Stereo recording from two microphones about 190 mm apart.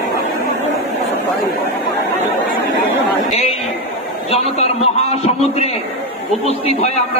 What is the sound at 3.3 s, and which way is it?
A man's voice, 35° left (ahead or behind).